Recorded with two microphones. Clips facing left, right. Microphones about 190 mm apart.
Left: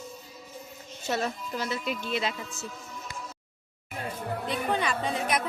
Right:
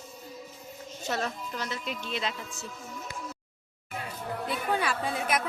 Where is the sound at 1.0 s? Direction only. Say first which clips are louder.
Left 2 dB; 5° left (ahead or behind).